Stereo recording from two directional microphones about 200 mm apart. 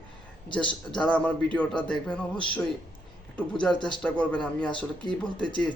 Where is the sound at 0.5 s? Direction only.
5° left (ahead or behind).